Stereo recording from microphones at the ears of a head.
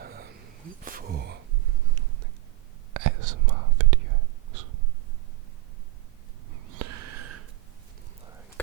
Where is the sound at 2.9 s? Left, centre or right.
Right.